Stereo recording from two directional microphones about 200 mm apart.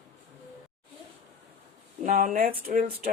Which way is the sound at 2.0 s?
45° right (ahead or behind).